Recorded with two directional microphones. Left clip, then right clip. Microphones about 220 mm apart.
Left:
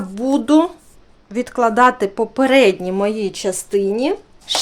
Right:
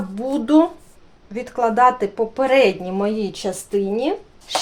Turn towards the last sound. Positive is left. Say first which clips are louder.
# left 3 dB
turn(degrees=40)  # may be behind; listen again after turning